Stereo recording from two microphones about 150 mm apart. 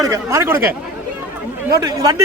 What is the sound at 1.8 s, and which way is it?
Speech, 25° right (ahead or behind).